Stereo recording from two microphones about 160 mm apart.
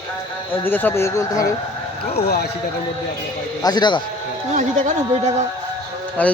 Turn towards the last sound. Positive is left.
turn(degrees=10)  # may be behind; listen again after turning